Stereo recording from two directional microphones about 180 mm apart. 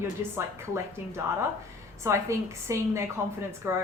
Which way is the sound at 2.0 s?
15° right (ahead or behind).